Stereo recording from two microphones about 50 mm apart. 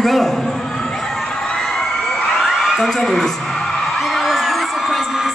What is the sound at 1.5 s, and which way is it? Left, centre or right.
Crowd, centre.